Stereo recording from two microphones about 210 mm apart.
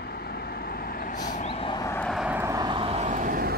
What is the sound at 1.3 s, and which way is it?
Vehicle, 30° left (ahead or behind).